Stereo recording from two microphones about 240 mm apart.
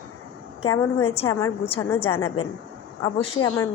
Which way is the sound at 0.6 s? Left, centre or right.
Centre.